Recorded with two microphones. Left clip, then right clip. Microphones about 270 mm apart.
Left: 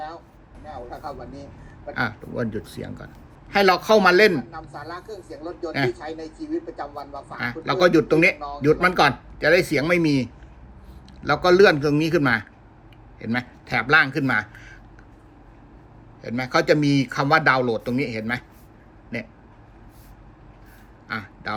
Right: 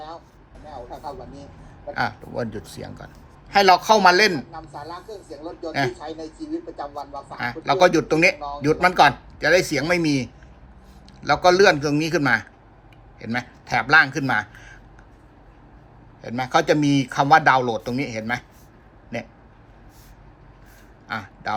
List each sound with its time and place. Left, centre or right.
0.9 s a man's voice: centre
4.5 s speech: centre
5.1 s a man's voice: centre
11.3 s a man's voice: centre
16.2 s speech: centre
21.1 s a sound: centre